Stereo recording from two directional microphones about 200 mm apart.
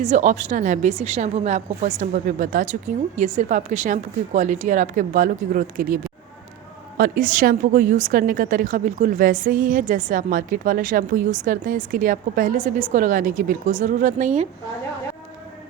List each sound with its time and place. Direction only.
0.0 s a woman's voice: 35° right (ahead or behind)